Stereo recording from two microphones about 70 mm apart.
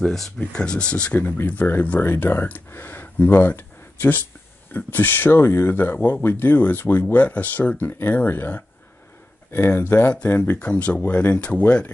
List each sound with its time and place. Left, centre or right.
0.0 s speech: centre; by 10.6 s left
10.6 s speech: centre